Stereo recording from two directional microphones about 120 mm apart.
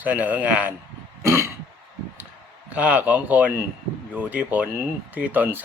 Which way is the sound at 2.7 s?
10° right (ahead or behind).